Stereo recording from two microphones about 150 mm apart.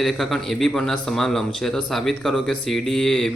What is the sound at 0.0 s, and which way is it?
Speech, centre (ahead or behind).